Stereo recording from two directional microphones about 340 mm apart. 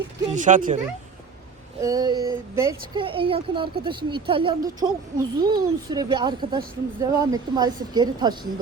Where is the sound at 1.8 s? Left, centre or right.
Centre.